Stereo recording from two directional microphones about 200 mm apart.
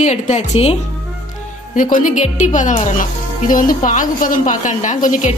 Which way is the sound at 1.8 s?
40° left (ahead or behind).